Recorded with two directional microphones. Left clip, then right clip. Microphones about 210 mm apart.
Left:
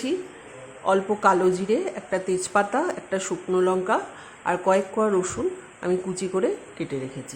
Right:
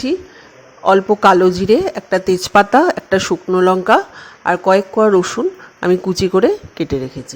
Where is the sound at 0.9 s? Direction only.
30° right (ahead or behind).